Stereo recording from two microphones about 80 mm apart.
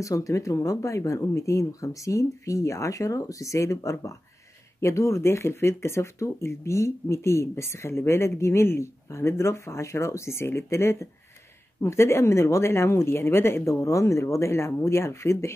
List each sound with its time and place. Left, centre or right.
0.0 s speech: left